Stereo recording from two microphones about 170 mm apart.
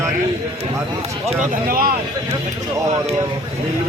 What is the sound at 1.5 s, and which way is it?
Speech, 60° right (ahead or behind).